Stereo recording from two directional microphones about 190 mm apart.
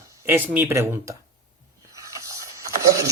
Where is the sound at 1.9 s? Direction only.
15° right (ahead or behind).